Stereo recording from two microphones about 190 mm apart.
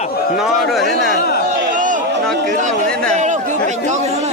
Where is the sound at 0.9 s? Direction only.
55° left (ahead or behind).